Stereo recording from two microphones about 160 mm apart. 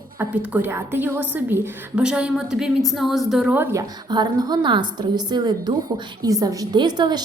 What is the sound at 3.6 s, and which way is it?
A woman's voice, 20° right (ahead or behind).